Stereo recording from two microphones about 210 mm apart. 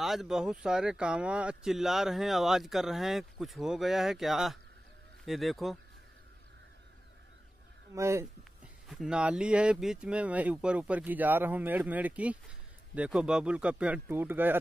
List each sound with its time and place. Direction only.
0.0 s speech: centre (ahead or behind)
7.9 s speech: 15° right (ahead or behind)
8.8 s speech: 5° right (ahead or behind)